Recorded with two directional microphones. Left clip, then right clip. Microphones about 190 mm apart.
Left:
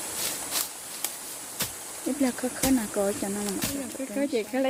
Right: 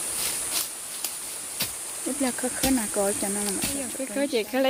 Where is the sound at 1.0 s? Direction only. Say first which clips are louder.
Even; 35° left (ahead or behind).